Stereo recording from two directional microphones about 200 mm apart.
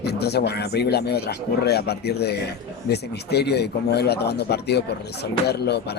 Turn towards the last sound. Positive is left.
turn(degrees=55)  # may be behind; listen again after turning